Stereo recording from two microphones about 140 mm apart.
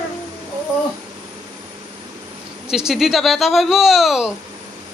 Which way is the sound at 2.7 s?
5° right (ahead or behind).